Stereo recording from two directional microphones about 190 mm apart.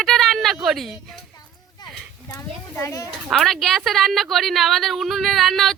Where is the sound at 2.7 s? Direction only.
15° left (ahead or behind).